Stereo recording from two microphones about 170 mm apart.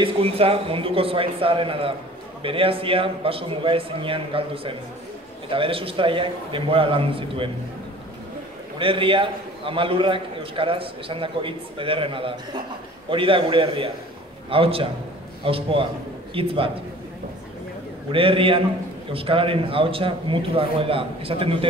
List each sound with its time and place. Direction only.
0.0 s a man's voice: 35° right (ahead or behind)
8.7 s a man's voice: 30° right (ahead or behind)
18.1 s a man's voice: 30° right (ahead or behind)